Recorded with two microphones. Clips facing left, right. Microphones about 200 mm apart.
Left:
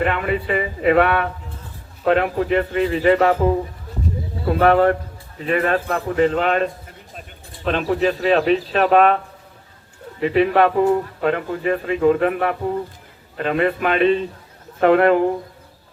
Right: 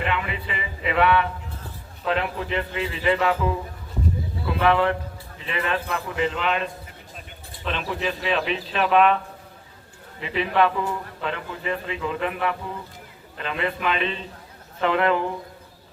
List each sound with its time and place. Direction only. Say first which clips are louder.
0.0 s speech: left 7 dB; 50° left (ahead or behind)